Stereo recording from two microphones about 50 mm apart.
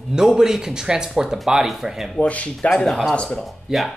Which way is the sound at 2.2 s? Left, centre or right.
Left.